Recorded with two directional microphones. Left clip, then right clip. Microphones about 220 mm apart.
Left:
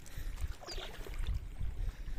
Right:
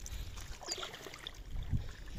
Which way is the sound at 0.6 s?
40° right (ahead or behind).